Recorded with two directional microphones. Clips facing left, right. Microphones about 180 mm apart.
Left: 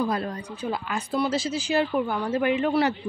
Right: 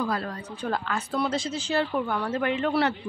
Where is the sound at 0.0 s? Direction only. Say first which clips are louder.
Left 2 dB; 20° left (ahead or behind).